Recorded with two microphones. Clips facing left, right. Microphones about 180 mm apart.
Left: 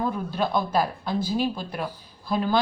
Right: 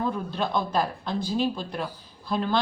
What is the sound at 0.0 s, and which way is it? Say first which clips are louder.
Speech: left 2 dB; 10° left (ahead or behind).